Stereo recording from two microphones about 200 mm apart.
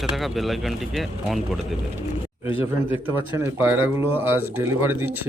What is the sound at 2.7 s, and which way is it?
Speech, 10° right (ahead or behind).